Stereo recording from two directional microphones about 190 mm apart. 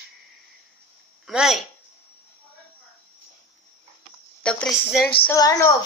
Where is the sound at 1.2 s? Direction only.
Centre (ahead or behind).